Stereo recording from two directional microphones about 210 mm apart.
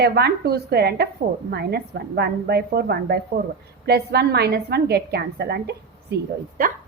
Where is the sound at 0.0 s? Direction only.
50° right (ahead or behind).